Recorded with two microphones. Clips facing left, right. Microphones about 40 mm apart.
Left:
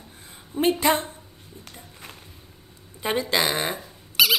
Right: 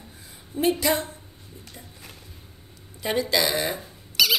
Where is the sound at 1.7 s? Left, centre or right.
Left.